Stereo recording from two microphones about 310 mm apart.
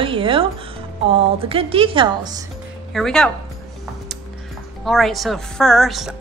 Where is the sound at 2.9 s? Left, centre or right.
Centre.